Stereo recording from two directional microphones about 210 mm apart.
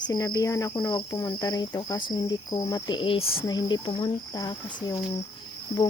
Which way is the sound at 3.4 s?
20° left (ahead or behind).